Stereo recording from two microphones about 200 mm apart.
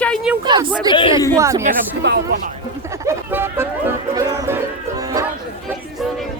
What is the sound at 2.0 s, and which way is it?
Speech, 55° right (ahead or behind).